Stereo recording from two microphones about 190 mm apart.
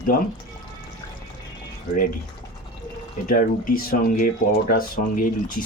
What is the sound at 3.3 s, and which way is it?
Speech, 45° left (ahead or behind).